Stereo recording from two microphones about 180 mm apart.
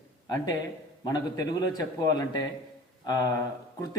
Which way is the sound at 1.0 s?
20° left (ahead or behind).